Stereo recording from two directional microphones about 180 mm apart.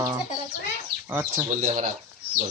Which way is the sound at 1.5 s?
45° right (ahead or behind).